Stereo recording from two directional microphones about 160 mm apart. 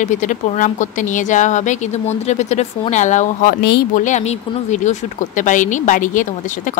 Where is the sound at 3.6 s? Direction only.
90° left.